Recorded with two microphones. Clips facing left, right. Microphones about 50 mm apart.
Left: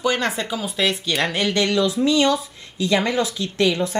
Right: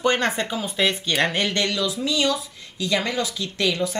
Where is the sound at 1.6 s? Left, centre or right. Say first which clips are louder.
Left 6 dB; left.